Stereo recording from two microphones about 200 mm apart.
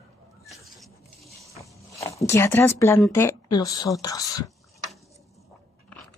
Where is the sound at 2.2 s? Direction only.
10° left (ahead or behind).